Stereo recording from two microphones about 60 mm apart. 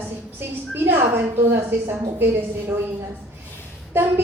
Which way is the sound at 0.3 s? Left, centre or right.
Right.